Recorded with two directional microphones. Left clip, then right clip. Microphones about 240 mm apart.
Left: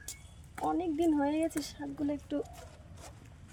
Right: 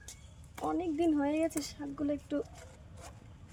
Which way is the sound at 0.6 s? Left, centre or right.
Centre.